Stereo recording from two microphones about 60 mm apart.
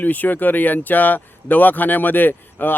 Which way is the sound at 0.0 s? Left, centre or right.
Left.